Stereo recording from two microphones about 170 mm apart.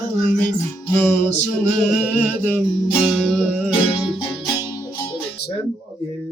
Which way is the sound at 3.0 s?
Centre (ahead or behind).